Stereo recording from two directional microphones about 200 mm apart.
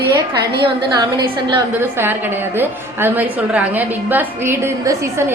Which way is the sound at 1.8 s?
10° right (ahead or behind).